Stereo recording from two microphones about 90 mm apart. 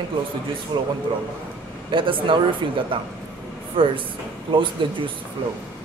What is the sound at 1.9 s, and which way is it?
A man's voice, 70° right (ahead or behind).